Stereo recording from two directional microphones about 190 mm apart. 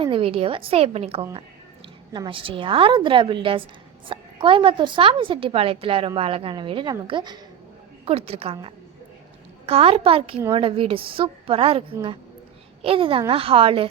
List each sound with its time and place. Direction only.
0.0 s a woman's voice: 30° right (ahead or behind)
12.8 s a woman's voice: 30° right (ahead or behind)